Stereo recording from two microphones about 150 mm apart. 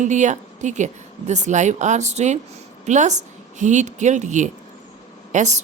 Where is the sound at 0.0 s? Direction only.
55° right (ahead or behind).